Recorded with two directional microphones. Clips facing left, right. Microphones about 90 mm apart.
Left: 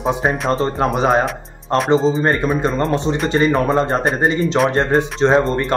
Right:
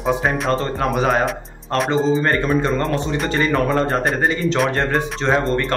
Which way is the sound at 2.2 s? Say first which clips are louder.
Left 1 dB; 20° left (ahead or behind).